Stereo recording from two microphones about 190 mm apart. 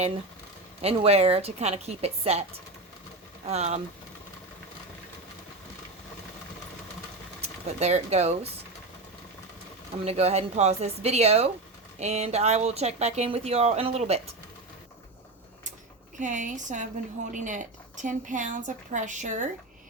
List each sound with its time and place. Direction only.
0.8 s speech: 30° right (ahead or behind)
7.4 s speech: 35° right (ahead or behind)
10.0 s speech: 35° right (ahead or behind)
16.1 s speech: 40° right (ahead or behind)